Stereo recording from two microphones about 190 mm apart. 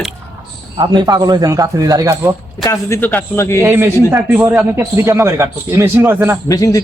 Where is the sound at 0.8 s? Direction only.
20° right (ahead or behind).